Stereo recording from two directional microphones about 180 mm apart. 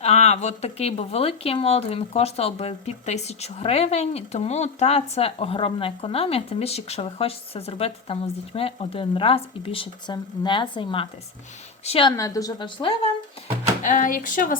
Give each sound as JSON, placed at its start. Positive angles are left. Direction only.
{"t": 0.0, "sound": "a woman's voice", "side_deg": 35}
{"t": 12.1, "sound": "a woman's voice", "side_deg": 20}
{"t": 13.8, "sound": "speech", "side_deg": 45}